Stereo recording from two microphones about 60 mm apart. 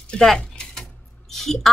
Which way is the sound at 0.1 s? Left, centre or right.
Centre.